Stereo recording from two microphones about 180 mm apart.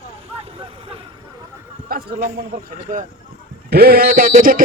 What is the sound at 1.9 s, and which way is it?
A man's voice, 55° right (ahead or behind).